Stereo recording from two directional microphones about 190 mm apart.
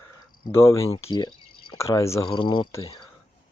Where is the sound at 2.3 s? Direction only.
25° left (ahead or behind).